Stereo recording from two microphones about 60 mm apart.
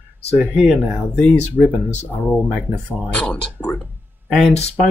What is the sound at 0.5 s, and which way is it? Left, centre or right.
Speech, centre.